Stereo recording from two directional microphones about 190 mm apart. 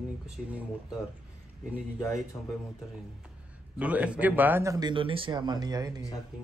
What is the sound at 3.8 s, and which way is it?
Speech, 5° right (ahead or behind).